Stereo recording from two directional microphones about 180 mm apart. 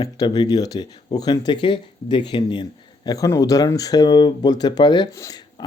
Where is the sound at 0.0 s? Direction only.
20° left (ahead or behind).